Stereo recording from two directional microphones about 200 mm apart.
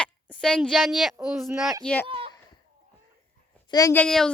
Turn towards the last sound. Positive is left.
turn(degrees=5)  # may be behind; listen again after turning